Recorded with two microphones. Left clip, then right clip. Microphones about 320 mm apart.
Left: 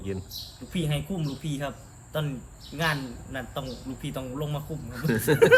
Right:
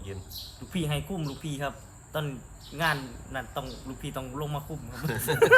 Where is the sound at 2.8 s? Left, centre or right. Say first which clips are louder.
Even; centre.